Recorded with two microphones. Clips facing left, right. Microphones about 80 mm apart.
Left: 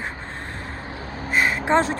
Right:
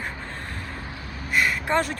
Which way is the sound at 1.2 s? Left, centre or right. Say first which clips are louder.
Left 3 dB; left.